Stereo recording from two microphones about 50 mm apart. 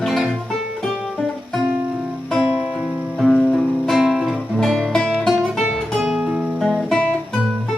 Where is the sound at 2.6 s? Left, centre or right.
Centre.